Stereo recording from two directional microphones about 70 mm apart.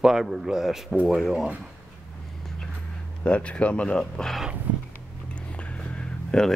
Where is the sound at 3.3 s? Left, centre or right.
Centre.